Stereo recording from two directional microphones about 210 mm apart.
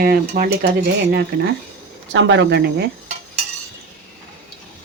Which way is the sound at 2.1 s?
60° right (ahead or behind).